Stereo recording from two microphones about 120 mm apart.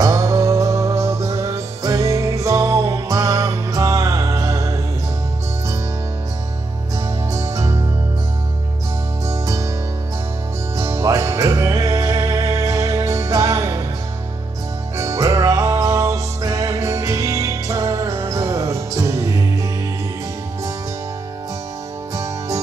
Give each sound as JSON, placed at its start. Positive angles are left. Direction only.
{"t": 0.0, "sound": "music", "side_deg": -25}
{"t": 7.3, "sound": "music", "side_deg": -25}
{"t": 9.3, "sound": "music", "side_deg": -25}
{"t": 10.8, "sound": "music", "side_deg": -25}
{"t": 15.0, "sound": "music", "side_deg": -25}
{"t": 22.1, "sound": "music", "side_deg": -25}